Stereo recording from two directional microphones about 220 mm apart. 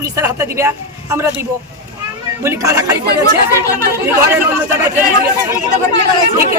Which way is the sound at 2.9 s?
45° right (ahead or behind).